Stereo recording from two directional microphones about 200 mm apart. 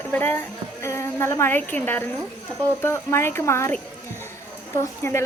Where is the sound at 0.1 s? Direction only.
10° left (ahead or behind).